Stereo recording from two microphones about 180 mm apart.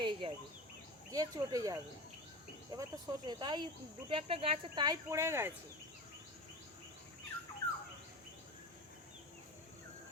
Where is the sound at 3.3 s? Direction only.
25° right (ahead or behind).